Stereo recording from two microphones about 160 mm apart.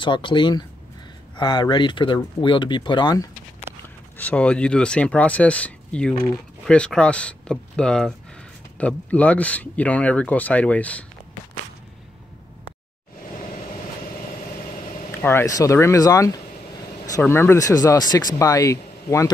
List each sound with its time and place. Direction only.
0.0 s speech: 30° left (ahead or behind)
4.2 s speech: 10° left (ahead or behind)
15.0 s speech: 15° left (ahead or behind)